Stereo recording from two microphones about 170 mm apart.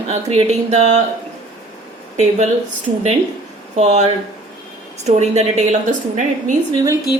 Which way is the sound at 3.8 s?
40° right (ahead or behind).